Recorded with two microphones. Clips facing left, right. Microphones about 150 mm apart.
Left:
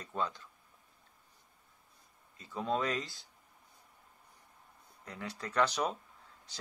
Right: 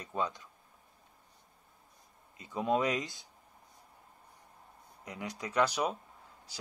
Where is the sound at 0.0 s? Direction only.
15° right (ahead or behind).